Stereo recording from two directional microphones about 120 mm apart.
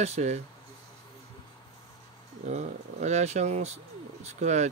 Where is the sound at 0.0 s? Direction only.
65° right (ahead or behind).